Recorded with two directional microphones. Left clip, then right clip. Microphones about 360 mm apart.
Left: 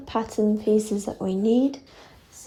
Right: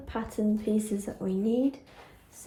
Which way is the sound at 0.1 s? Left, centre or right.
Left.